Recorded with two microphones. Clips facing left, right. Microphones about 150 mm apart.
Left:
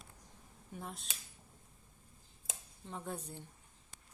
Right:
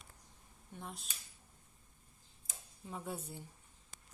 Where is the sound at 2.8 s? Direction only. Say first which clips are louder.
Even; 5° right (ahead or behind).